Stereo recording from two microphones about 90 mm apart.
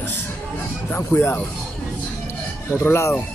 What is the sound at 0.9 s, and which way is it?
Speech, 20° left (ahead or behind).